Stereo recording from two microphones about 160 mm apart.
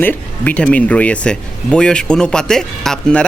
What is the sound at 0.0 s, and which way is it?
Speech, 10° left (ahead or behind).